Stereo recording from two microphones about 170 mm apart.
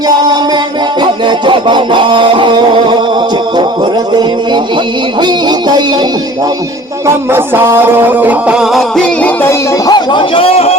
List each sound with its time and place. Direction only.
0.1 s music: 25° right (ahead or behind)
5.2 s music: 25° right (ahead or behind)
7.3 s music: 15° right (ahead or behind); by 10.8 s 35° left (ahead or behind)